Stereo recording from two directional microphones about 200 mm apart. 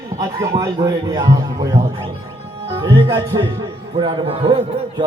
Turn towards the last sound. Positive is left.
turn(degrees=-25)  # may be behind; listen again after turning